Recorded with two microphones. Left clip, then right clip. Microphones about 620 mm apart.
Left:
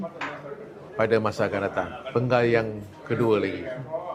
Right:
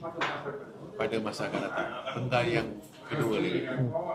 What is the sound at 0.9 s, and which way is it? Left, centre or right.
Speech, left.